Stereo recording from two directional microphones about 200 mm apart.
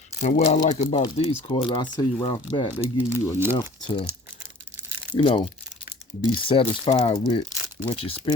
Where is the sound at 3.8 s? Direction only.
20° left (ahead or behind).